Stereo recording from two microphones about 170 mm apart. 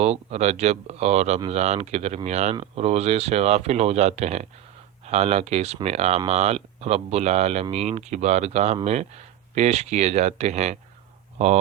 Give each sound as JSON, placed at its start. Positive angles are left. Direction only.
{"t": 0.0, "sound": "speech", "side_deg": -40}